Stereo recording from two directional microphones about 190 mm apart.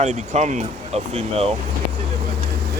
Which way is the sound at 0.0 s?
40° right (ahead or behind).